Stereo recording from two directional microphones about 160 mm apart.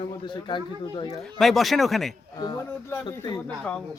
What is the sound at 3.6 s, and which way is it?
Speech, 5° left (ahead or behind).